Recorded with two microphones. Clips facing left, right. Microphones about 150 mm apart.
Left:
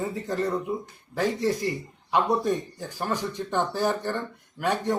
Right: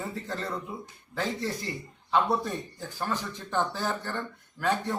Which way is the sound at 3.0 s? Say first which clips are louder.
Left 4 dB; 15° left (ahead or behind).